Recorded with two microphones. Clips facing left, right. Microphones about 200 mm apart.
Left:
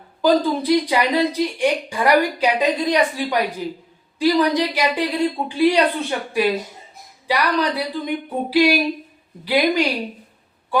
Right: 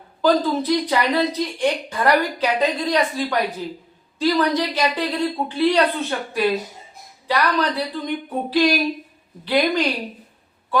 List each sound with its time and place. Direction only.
0.6 s a woman's voice: 10° left (ahead or behind)